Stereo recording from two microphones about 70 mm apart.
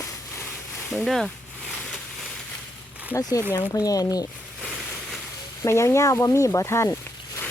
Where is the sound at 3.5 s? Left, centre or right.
Left.